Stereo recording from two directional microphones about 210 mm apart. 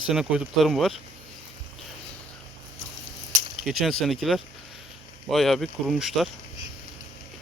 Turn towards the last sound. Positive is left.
turn(degrees=0)  # may be behind; listen again after turning